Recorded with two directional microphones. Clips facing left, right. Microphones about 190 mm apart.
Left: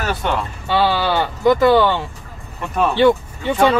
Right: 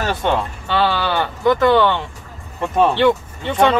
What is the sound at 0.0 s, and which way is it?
Speech, 25° right (ahead or behind).